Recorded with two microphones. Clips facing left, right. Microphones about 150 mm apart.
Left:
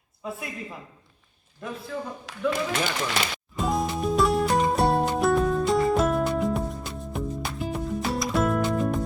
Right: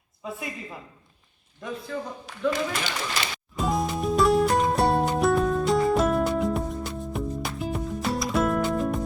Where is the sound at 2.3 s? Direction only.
90° left.